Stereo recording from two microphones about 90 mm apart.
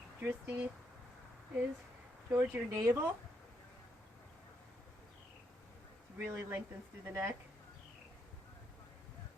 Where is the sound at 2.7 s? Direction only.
40° right (ahead or behind).